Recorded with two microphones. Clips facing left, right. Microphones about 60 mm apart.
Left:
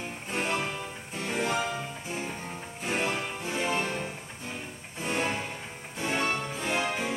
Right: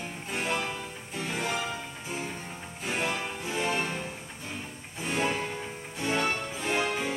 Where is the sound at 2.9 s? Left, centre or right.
Centre.